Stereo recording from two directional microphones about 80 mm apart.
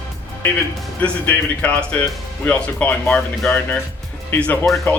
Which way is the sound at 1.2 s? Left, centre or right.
Centre.